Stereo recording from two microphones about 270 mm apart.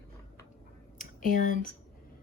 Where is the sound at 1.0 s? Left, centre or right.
Left.